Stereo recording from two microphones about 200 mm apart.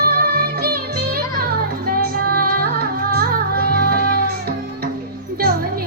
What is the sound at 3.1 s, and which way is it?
Music, 50° right (ahead or behind).